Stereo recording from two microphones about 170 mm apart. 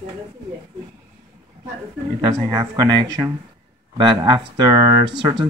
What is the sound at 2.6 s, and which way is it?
Speech, 20° right (ahead or behind).